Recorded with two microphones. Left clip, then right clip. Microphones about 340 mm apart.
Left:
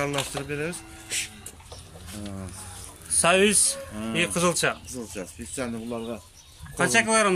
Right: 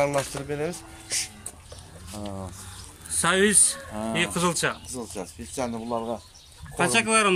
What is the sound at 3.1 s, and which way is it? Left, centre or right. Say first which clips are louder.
A man's voice: left 2 dB; centre.